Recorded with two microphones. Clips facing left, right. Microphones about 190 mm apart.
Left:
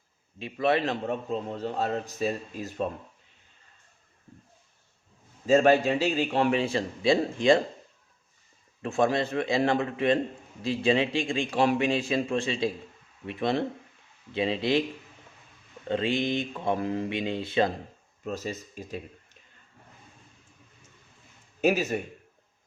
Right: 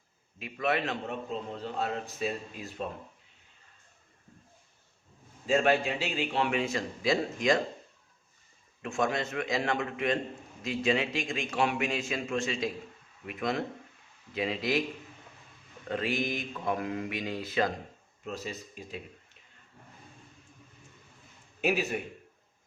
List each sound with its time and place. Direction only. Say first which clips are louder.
0.3 s a man's voice: left 5 dB; 30° left (ahead or behind)
5.5 s a man's voice: left 6 dB; 40° left (ahead or behind)
8.8 s a man's voice: left 5 dB; 35° left (ahead or behind)
15.9 s speech: left 5 dB; 25° left (ahead or behind)
18.3 s a man's voice: left 5 dB; 45° left (ahead or behind)
21.6 s speech: left 5 dB; 45° left (ahead or behind)